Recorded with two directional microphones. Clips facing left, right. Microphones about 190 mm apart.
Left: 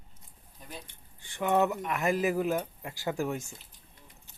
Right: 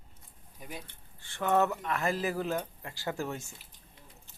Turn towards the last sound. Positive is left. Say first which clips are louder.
# left 4 dB
turn(degrees=15)  # may be behind; listen again after turning